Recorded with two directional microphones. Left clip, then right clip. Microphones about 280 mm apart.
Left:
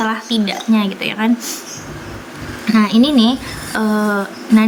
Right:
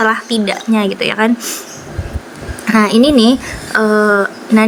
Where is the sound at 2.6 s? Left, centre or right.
Centre.